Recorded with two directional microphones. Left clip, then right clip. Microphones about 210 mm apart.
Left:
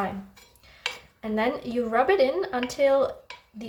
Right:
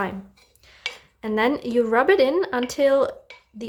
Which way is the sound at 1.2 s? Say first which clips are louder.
Right 5 dB; 45° right (ahead or behind).